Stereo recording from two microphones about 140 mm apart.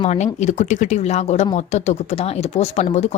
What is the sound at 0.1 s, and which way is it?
Speech, 55° left (ahead or behind).